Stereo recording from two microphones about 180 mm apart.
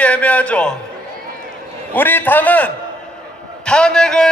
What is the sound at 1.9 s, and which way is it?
Speech, 10° left (ahead or behind).